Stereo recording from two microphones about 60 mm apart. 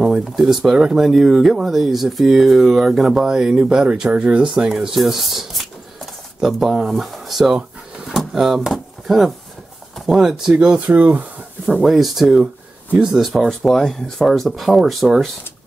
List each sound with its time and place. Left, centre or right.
0.0 s speech: centre
10.9 s speech: right
11.8 s speech: centre